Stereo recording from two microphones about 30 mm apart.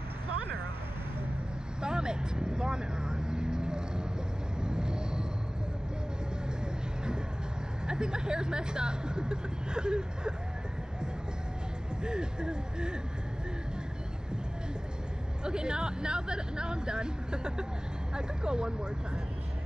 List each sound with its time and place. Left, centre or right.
1.8 s vehicle: right
7.8 s speech: right
12.0 s speech: right
15.4 s speech: right